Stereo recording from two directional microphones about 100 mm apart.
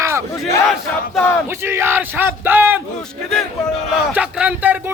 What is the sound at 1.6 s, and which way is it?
Speech, 25° right (ahead or behind).